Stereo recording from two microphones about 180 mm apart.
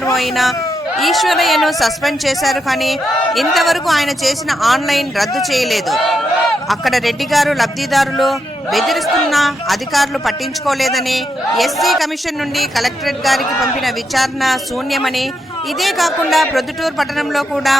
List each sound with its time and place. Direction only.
0.1 s a man's voice: centre (ahead or behind)